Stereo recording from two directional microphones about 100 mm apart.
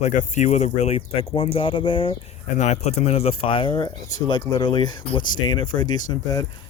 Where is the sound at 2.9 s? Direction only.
90° left; by 6.4 s 40° left (ahead or behind).